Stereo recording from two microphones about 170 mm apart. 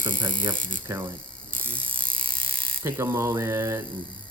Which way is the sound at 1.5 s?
10° left (ahead or behind).